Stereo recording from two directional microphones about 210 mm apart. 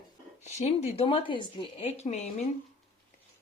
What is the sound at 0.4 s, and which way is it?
A woman's voice, 30° left (ahead or behind).